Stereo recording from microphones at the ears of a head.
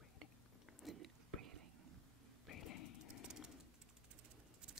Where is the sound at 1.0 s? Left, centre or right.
Right.